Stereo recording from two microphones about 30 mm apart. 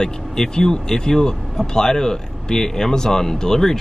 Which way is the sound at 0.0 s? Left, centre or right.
Left.